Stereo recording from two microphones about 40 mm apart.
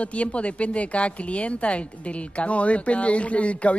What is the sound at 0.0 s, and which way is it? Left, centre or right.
A woman's voice, left.